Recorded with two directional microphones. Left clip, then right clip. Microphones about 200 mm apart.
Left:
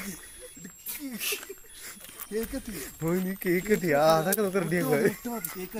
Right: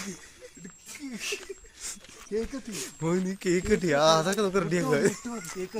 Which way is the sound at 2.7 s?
10° right (ahead or behind).